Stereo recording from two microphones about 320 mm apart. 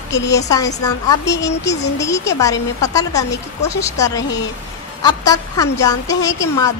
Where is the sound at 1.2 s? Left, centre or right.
Left.